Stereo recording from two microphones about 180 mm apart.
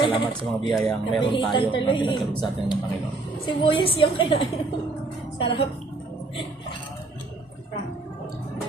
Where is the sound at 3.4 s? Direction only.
30° left (ahead or behind).